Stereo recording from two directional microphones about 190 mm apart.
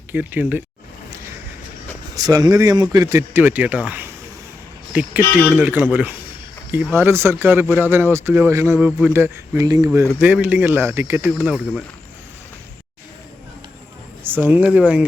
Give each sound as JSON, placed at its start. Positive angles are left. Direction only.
{"t": 0.1, "sound": "speech", "side_deg": -10}
{"t": 2.1, "sound": "speech", "side_deg": -20}
{"t": 14.3, "sound": "speech", "side_deg": -10}